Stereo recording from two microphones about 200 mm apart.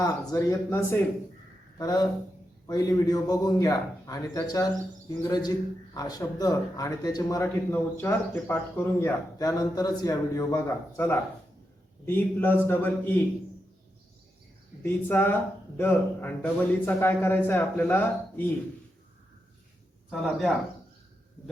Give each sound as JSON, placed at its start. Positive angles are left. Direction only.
{"t": 0.0, "sound": "speech", "side_deg": 15}
{"t": 15.0, "sound": "speech", "side_deg": 10}
{"t": 20.1, "sound": "speech", "side_deg": 5}